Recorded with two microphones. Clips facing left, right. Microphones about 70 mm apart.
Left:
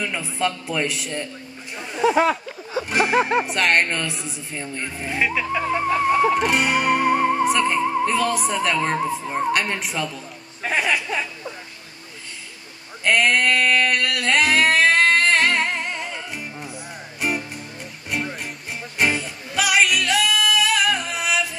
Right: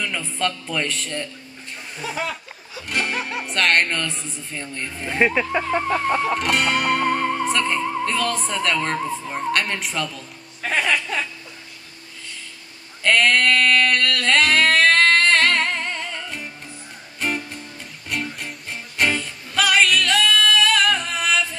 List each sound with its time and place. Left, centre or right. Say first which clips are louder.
0.0 s a woman's voice: left 1 dB; centre
2.1 s a sound: left 9 dB; left
2.9 s a woman's voice: left 4 dB; centre
3.2 s speech: left 9 dB; left
3.4 s a woman's voice: even; centre
5.2 s speech: right 4 dB; centre
5.9 s a woman's voice: left 2 dB; centre
6.3 s music: left 1 dB; centre
13.0 s singing: right 1 dB; centre
17.2 s music: left 1 dB; centre